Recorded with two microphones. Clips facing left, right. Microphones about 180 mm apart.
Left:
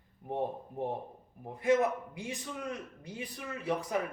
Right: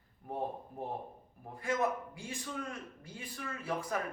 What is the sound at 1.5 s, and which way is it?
A man's voice, 20° left (ahead or behind).